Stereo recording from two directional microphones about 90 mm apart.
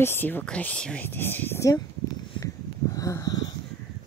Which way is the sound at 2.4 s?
40° left (ahead or behind).